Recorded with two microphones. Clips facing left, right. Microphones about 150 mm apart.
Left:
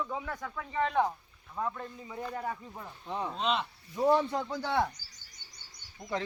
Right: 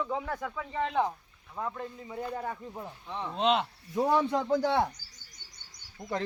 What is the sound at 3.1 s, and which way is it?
Speech, 10° left (ahead or behind).